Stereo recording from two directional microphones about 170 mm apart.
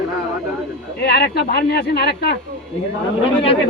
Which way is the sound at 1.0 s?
70° left (ahead or behind).